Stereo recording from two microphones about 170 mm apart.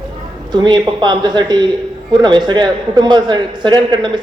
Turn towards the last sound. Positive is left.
turn(degrees=-25)  # may be behind; listen again after turning